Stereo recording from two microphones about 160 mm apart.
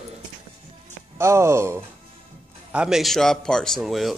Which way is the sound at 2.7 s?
5° right (ahead or behind).